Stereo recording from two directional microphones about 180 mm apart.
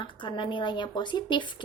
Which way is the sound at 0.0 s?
25° left (ahead or behind).